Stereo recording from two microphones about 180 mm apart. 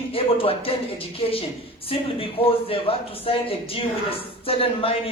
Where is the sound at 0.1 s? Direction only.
30° left (ahead or behind).